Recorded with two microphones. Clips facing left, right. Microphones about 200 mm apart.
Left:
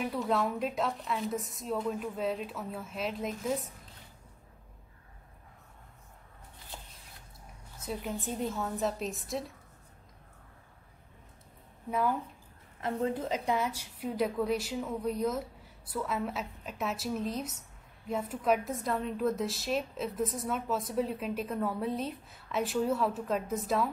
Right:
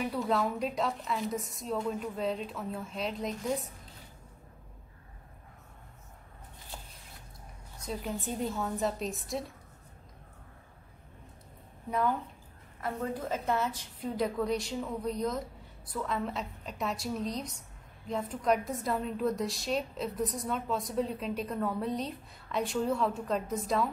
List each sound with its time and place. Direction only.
0.0 s a woman's voice: centre (ahead or behind)
7.8 s a woman's voice: 5° left (ahead or behind)
11.9 s a woman's voice: 5° left (ahead or behind)
12.8 s a woman's voice: 20° left (ahead or behind); by 23.9 s centre (ahead or behind)